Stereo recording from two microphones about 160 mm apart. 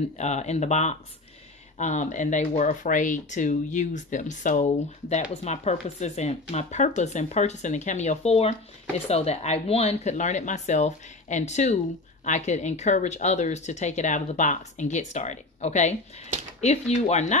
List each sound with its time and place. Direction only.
0.2 s speech: 45° left (ahead or behind)